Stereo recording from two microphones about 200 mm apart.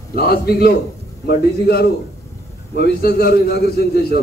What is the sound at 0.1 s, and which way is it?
A man's voice, 50° left (ahead or behind).